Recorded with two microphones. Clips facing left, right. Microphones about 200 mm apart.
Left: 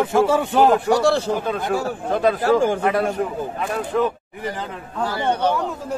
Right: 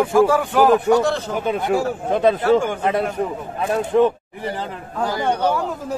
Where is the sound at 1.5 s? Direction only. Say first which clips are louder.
Right 3 dB; 20° right (ahead or behind).